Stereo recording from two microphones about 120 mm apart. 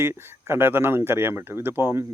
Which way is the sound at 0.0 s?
20° right (ahead or behind).